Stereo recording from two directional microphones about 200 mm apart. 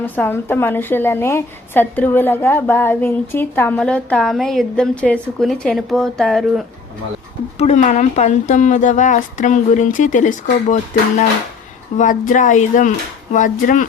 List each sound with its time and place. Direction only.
0.0 s a woman's voice: 10° left (ahead or behind)
7.6 s speech: 35° left (ahead or behind)
11.9 s speech: 40° left (ahead or behind)